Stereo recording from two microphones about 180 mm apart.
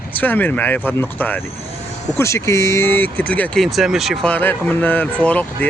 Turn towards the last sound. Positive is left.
turn(degrees=10)  # may be behind; listen again after turning